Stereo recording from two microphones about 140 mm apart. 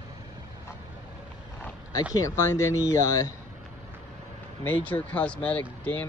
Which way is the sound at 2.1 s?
20° left (ahead or behind).